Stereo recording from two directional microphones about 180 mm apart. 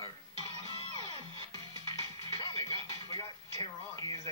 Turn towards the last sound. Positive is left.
turn(degrees=-30)  # may be behind; listen again after turning